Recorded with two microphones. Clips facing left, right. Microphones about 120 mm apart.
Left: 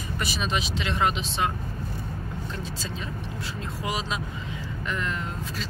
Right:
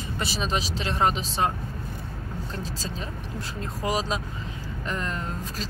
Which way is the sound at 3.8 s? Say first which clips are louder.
Right 4 dB; 40° right (ahead or behind).